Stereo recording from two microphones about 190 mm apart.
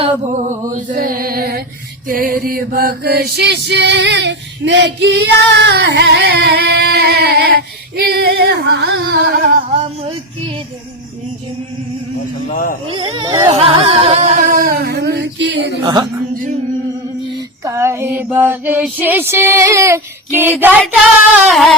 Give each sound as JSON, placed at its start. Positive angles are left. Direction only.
{"t": 0.0, "sound": "a sound", "side_deg": -40}
{"t": 0.9, "sound": "mantra", "side_deg": -50}
{"t": 2.0, "sound": "music", "side_deg": -50}
{"t": 9.7, "sound": "music", "side_deg": -30}
{"t": 12.5, "sound": "a man's voice", "side_deg": 45}
{"t": 12.9, "sound": "a sound", "side_deg": -25}
{"t": 15.8, "sound": "a woman's voice", "side_deg": -20}
{"t": 17.7, "sound": "female singing", "side_deg": -15}
{"t": 21.3, "sound": "a sound", "side_deg": -5}